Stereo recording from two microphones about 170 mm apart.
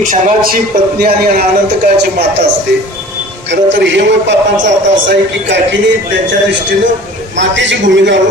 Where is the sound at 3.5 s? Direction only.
90° right.